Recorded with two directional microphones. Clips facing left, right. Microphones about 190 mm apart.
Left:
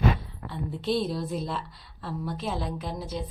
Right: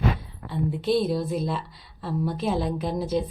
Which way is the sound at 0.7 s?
5° right (ahead or behind).